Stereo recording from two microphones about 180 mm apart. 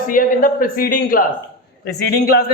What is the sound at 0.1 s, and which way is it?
A man's voice, 50° left (ahead or behind).